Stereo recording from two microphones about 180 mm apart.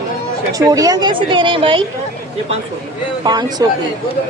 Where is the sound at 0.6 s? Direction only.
20° right (ahead or behind).